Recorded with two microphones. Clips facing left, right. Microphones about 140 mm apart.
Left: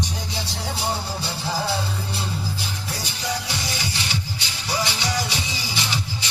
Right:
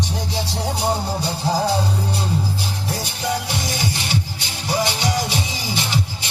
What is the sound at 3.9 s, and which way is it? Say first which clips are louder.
Music: right 4 dB; 50° right (ahead or behind).